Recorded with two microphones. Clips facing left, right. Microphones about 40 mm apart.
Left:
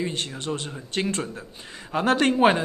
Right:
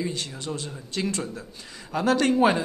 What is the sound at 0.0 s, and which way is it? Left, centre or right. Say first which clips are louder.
Speech: left 2 dB; left.